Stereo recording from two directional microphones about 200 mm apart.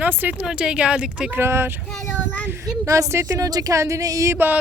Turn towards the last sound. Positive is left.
turn(degrees=-10)  # may be behind; listen again after turning